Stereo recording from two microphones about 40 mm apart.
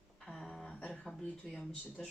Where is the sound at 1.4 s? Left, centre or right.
Centre.